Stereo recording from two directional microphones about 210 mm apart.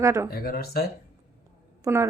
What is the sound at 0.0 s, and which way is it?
Speech, 15° right (ahead or behind).